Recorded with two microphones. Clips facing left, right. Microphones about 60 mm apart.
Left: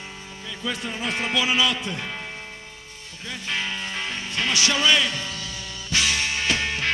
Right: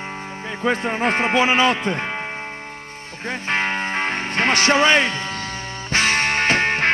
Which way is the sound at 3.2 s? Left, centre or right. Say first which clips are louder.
Right 7 dB; right.